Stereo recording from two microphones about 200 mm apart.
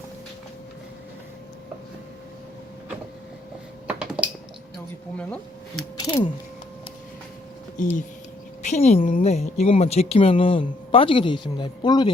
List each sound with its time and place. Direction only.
3.8 s typing: 5° right (ahead or behind)
5.1 s speech: 5° left (ahead or behind)
6.0 s speech: 20° left (ahead or behind)
7.8 s speech: 40° left (ahead or behind); by 12.1 s 20° left (ahead or behind)